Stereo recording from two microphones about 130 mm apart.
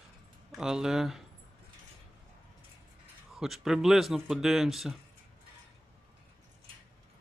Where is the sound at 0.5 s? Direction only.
5° right (ahead or behind).